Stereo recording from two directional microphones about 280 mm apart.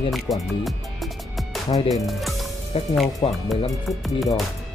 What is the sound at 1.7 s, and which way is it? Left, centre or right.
Speech, left.